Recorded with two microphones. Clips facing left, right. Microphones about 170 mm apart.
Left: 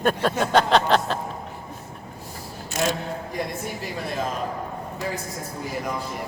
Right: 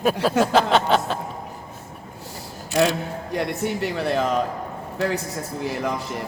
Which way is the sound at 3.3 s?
70° right (ahead or behind).